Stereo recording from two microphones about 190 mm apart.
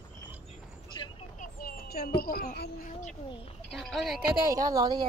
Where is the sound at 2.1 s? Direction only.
50° left (ahead or behind).